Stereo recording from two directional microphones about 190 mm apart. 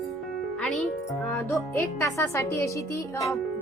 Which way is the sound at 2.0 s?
15° left (ahead or behind).